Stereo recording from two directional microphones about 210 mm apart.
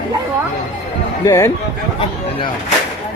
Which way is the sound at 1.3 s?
15° left (ahead or behind).